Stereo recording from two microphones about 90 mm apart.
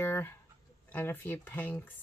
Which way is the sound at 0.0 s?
25° left (ahead or behind).